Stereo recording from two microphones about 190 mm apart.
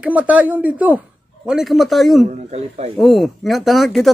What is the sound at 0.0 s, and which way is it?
Speech, 5° right (ahead or behind).